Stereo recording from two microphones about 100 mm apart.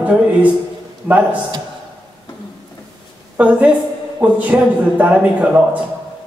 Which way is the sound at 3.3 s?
15° right (ahead or behind).